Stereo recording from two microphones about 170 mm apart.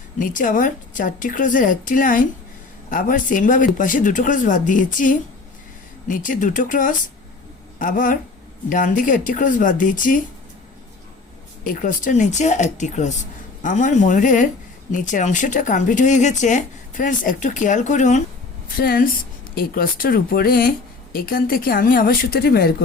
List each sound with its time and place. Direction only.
0.2 s speech: 50° left (ahead or behind)
11.6 s speech: 55° left (ahead or behind)
18.8 s speech: 60° left (ahead or behind)